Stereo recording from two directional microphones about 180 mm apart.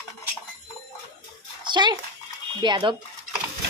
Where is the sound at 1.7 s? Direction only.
25° right (ahead or behind).